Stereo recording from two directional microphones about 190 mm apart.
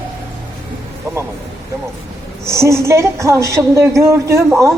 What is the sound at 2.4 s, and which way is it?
A woman's voice, 15° right (ahead or behind).